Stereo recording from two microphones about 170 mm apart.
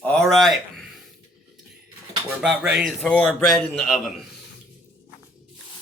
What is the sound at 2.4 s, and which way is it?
Speech, 5° right (ahead or behind).